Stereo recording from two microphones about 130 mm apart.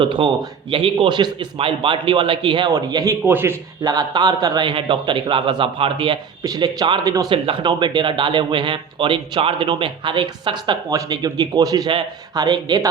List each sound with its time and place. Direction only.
0.0 s a man's voice: 40° right (ahead or behind); by 3.6 s 15° right (ahead or behind)
3.8 s a man's voice: 30° right (ahead or behind)
6.4 s speech: 30° right (ahead or behind)
7.4 s a man's voice: 40° right (ahead or behind)